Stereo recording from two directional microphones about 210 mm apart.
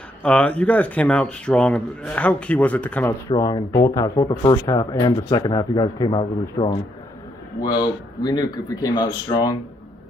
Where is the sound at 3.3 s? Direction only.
20° left (ahead or behind).